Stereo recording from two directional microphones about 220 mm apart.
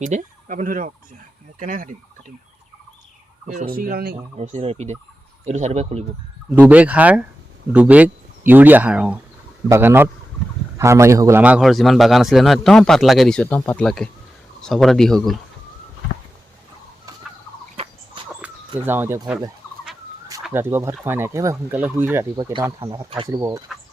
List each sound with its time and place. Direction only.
0.0 s speech: 35° right (ahead or behind)
3.4 s speech: 35° right (ahead or behind)
4.4 s speech: 30° right (ahead or behind)
6.5 s a man's voice: 5° right (ahead or behind)
18.2 s dog: 25° right (ahead or behind)
18.8 s speech: 10° right (ahead or behind)